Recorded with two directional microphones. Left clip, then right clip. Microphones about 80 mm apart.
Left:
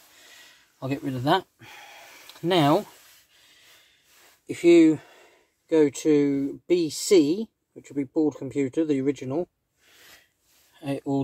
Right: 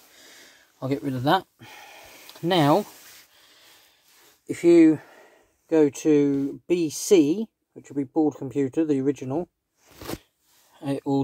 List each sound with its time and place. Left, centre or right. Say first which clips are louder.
0.7 s speech: right 3 dB; right
4.5 s speech: right 1 dB; right
10.8 s speech: right 2 dB; right